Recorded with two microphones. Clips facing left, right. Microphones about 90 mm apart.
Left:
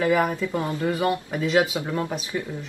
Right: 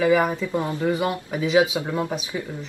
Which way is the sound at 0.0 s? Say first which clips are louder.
Right 2 dB; 5° right (ahead or behind).